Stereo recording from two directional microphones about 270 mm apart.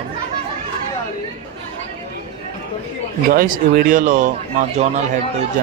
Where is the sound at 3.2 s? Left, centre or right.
Right.